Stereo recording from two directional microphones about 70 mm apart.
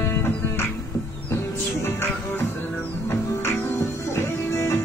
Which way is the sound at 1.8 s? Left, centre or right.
Left.